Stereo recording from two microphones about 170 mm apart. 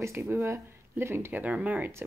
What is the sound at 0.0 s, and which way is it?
Speech, 15° right (ahead or behind).